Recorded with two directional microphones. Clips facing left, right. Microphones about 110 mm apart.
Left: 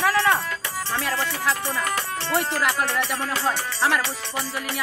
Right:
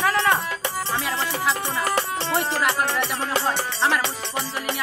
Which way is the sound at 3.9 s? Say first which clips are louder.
Right 1 dB; 20° right (ahead or behind).